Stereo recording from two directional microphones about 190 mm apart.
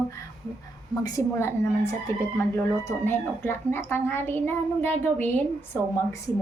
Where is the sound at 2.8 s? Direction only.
10° left (ahead or behind).